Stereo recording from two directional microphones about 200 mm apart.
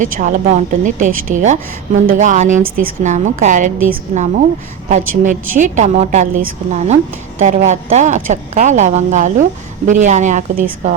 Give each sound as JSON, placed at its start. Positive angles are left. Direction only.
{"t": 0.0, "sound": "a woman's voice", "side_deg": -40}